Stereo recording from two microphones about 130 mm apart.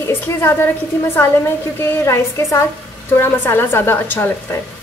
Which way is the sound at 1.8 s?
20° left (ahead or behind).